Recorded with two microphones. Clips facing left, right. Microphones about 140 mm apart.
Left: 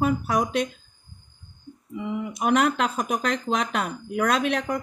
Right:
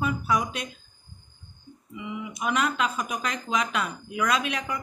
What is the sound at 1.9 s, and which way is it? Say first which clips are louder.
Speech: left 6 dB; 50° left (ahead or behind).